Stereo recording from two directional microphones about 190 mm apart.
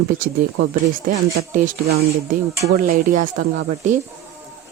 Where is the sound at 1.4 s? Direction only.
50° right (ahead or behind).